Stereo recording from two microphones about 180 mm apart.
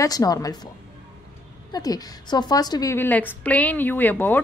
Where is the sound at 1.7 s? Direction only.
20° left (ahead or behind).